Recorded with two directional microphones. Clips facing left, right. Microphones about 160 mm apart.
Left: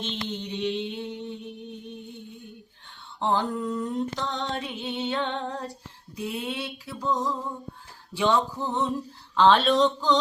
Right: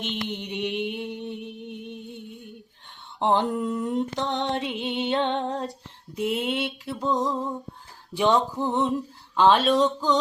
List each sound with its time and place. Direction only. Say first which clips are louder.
0.0 s mantra: right 1 dB; 15° right (ahead or behind)
3.2 s mantra: right 3 dB; 20° right (ahead or behind)
8.1 s music: right 2 dB; 15° right (ahead or behind)
9.3 s speech: even; 10° right (ahead or behind)
9.6 s music: even; 10° right (ahead or behind)